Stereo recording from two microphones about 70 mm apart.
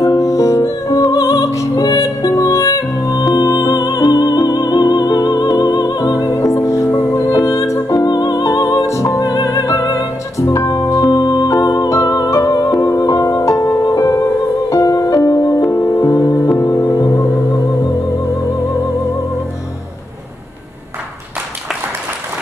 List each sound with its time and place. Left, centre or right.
0.0 s music: left
1.8 s music: left
6.3 s music: left
7.2 s music: left
8.1 s music: left
9.2 s music: left
11.9 s music: left
17.1 s music: left
17.6 s music: left